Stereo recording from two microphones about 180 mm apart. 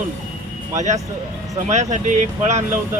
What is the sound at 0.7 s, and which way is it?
Speech, 40° right (ahead or behind).